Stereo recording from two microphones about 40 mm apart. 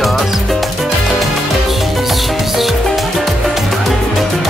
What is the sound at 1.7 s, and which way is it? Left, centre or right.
Music, centre.